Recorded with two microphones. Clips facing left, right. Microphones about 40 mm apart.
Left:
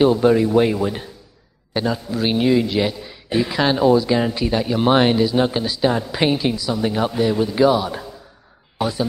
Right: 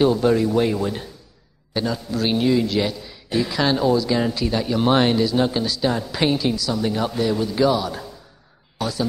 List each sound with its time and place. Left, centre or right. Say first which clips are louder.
0.0 s a man's voice: left 3 dB; centre